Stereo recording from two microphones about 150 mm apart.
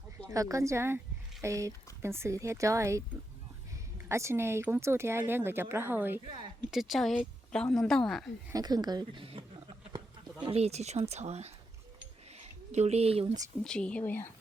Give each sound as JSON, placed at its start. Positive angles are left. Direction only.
{"t": 0.3, "sound": "speech", "side_deg": -20}
{"t": 4.1, "sound": "a woman's voice", "side_deg": -20}
{"t": 6.2, "sound": "speech", "side_deg": -35}
{"t": 6.7, "sound": "speech", "side_deg": 0}
{"t": 8.5, "sound": "speech", "side_deg": -25}
{"t": 10.4, "sound": "speech", "side_deg": -40}
{"t": 13.7, "sound": "a woman's voice", "side_deg": 5}